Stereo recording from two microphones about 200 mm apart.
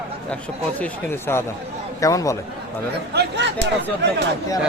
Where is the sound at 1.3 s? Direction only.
10° left (ahead or behind).